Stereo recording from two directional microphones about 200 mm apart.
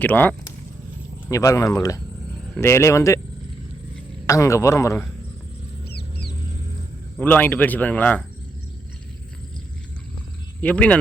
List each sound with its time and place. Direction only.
0.0 s speech: 10° left (ahead or behind)
4.3 s speech: 15° left (ahead or behind)
5.9 s a sound: 55° left (ahead or behind)
7.2 s speech: 10° left (ahead or behind)
10.6 s speech: 5° left (ahead or behind)